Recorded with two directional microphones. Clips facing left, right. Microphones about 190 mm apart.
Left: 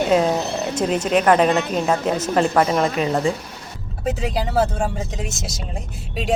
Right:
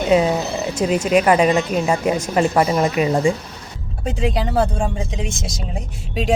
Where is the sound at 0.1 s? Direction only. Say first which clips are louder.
Right 5 dB; 5° right (ahead or behind).